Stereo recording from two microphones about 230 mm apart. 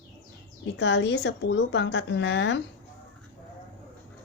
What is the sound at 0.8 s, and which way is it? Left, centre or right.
Speech, left.